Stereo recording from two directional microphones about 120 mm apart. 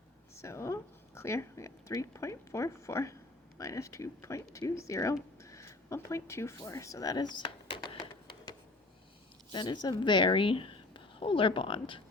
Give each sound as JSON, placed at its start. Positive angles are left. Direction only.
{"t": 0.3, "sound": "a woman's voice", "side_deg": 25}
{"t": 9.5, "sound": "a woman's voice", "side_deg": 40}